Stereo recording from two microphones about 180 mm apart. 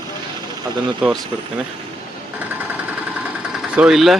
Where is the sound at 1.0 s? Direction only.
5° right (ahead or behind).